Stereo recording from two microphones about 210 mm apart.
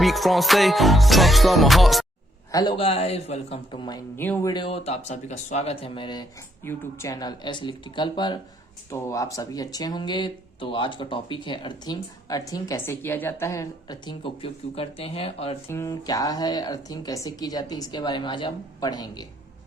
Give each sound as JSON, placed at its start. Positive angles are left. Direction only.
{"t": 0.0, "sound": "music", "side_deg": 0}
{"t": 2.5, "sound": "speech", "side_deg": 20}
{"t": 15.7, "sound": "speech", "side_deg": 15}